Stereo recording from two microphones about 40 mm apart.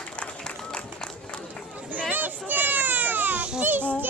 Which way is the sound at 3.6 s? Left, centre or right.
Right.